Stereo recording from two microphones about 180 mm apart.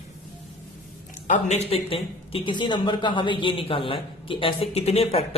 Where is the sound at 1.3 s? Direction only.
40° left (ahead or behind).